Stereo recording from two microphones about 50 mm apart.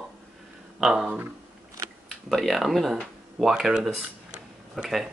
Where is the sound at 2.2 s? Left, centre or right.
Centre.